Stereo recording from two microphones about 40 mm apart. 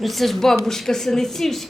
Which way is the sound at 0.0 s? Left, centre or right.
Centre.